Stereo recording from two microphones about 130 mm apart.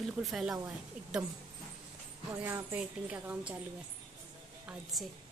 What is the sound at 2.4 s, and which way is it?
A woman's voice, 15° right (ahead or behind).